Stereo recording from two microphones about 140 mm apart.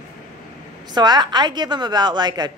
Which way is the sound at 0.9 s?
30° right (ahead or behind).